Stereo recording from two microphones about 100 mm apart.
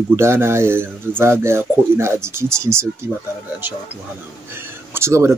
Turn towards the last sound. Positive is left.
turn(degrees=-30)  # may be behind; listen again after turning